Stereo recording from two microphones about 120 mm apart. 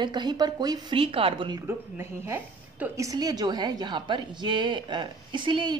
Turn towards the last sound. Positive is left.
turn(degrees=-40)  # may be behind; listen again after turning